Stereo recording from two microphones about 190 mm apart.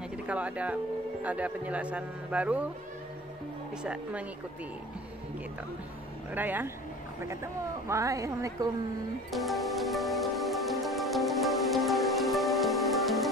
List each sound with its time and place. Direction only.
0.3 s a man's voice: 5° right (ahead or behind)
3.8 s speech: 5° right (ahead or behind)
6.3 s a man's voice: 10° right (ahead or behind)
7.9 s a man's voice: 15° right (ahead or behind)
9.3 s music: centre (ahead or behind)